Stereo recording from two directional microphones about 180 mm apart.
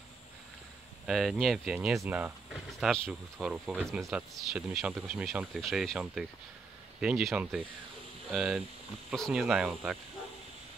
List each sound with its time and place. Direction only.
1.0 s speech: centre (ahead or behind)